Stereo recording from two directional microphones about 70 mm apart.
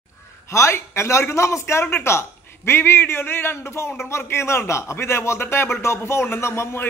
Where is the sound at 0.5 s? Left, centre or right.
Left.